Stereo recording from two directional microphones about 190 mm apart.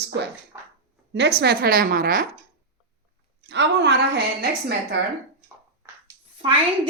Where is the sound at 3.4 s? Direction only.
65° right (ahead or behind).